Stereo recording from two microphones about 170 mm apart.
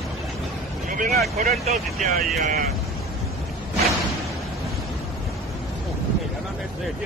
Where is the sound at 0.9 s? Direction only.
55° right (ahead or behind).